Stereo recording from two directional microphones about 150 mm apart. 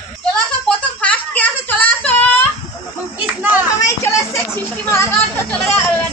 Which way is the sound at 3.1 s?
10° right (ahead or behind).